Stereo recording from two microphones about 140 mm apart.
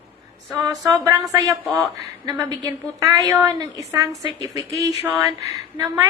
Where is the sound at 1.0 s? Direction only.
25° right (ahead or behind).